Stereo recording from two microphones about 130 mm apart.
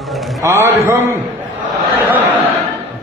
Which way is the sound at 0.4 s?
20° right (ahead or behind).